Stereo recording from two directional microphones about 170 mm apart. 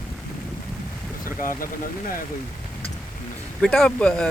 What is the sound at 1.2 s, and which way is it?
Vehicle, 15° left (ahead or behind).